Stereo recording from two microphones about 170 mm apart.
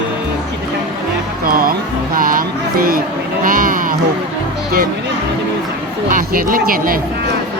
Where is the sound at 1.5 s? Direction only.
60° right (ahead or behind).